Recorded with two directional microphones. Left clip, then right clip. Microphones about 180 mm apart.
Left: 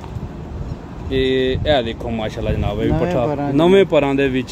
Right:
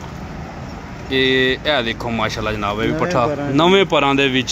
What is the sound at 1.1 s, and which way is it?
Speech, centre (ahead or behind).